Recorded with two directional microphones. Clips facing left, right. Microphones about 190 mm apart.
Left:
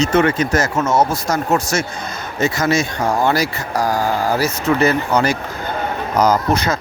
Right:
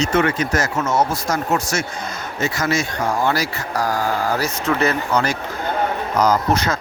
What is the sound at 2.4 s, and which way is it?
Speech, 20° left (ahead or behind).